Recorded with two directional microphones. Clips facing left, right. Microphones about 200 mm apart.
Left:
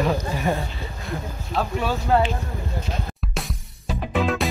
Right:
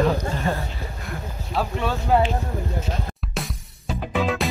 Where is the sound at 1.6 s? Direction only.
Centre (ahead or behind).